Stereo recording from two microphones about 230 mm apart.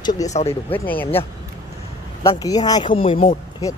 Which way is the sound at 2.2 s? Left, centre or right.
Centre.